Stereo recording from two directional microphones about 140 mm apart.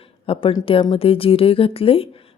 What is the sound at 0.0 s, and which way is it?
A woman's voice, 40° left (ahead or behind).